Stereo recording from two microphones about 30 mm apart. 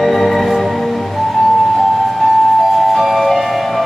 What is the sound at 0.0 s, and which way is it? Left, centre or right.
Music, centre.